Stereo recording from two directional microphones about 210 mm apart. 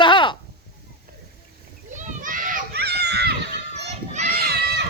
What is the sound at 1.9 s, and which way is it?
Children playing, 35° right (ahead or behind).